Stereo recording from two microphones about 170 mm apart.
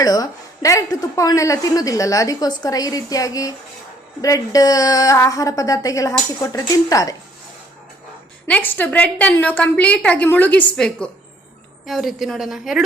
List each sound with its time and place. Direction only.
0.0 s a woman's voice: 20° left (ahead or behind)
8.4 s a woman's voice: 10° left (ahead or behind)